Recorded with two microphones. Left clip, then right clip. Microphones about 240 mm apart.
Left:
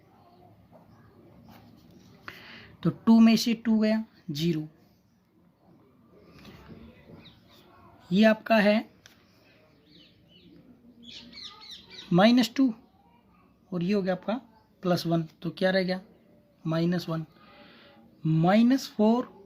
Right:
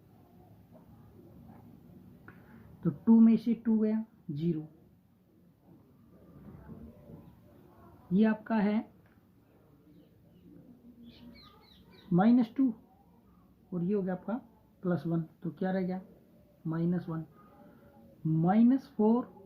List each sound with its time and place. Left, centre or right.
2.8 s speech: left
8.1 s speech: left
12.1 s speech: left
13.7 s speech: left
18.4 s speech: left